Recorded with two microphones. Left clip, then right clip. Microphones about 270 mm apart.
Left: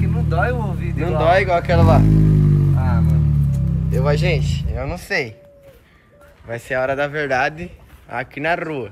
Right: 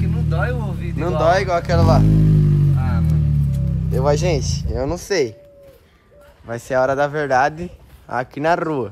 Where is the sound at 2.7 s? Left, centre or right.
Centre.